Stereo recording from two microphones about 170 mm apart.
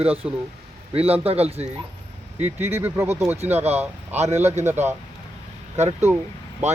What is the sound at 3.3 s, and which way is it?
Speech, 40° right (ahead or behind).